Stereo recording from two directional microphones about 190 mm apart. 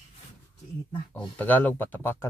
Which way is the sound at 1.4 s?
10° left (ahead or behind).